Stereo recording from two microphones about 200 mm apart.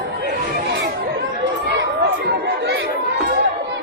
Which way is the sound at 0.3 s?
55° right (ahead or behind).